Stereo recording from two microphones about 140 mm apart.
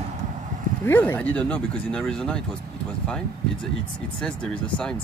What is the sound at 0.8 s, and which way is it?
Speech, 15° left (ahead or behind).